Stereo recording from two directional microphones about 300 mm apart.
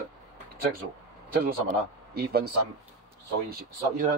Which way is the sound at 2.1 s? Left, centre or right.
Right.